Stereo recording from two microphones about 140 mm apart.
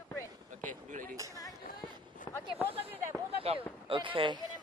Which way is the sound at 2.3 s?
25° left (ahead or behind).